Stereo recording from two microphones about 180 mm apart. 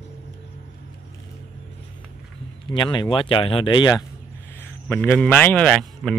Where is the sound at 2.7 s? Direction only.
25° left (ahead or behind).